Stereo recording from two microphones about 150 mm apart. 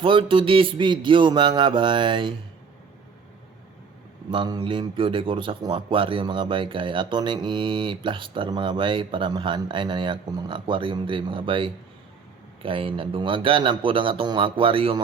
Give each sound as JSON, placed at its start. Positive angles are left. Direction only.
{"t": 0.0, "sound": "a man's voice", "side_deg": -35}
{"t": 4.3, "sound": "a man's voice", "side_deg": -30}